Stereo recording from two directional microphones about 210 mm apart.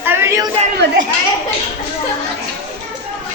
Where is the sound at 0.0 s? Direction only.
10° right (ahead or behind).